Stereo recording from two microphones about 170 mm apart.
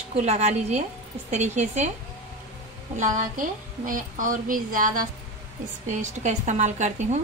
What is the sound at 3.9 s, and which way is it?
A woman's voice, 50° right (ahead or behind).